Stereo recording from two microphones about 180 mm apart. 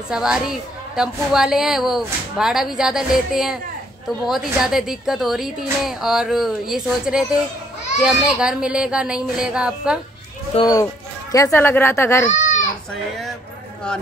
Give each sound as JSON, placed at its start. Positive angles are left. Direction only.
{"t": 0.1, "sound": "a woman's voice", "side_deg": -5}
{"t": 10.5, "sound": "speech", "side_deg": 20}